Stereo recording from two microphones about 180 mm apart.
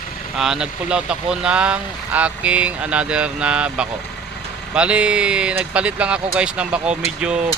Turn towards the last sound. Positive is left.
turn(degrees=-5)  # may be behind; listen again after turning